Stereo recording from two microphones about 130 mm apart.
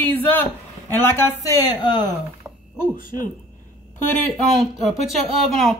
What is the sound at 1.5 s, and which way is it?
Speech, 30° left (ahead or behind).